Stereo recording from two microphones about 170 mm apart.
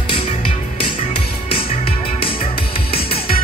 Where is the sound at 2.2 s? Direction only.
30° left (ahead or behind).